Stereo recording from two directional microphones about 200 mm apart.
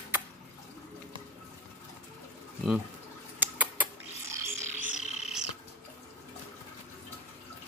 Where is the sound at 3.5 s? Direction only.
10° right (ahead or behind).